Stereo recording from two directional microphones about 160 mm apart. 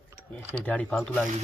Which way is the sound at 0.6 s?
10° left (ahead or behind).